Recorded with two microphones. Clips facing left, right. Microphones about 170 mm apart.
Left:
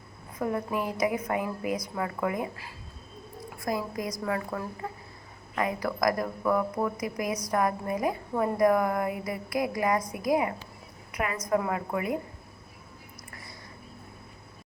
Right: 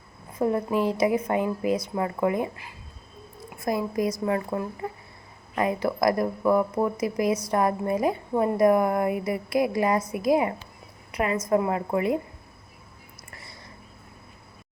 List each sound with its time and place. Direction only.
0.3 s a woman's voice: 30° right (ahead or behind)